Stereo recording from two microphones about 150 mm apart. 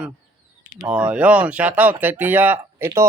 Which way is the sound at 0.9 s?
5° right (ahead or behind).